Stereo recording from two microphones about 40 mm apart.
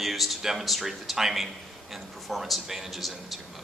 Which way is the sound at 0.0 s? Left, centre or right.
Centre.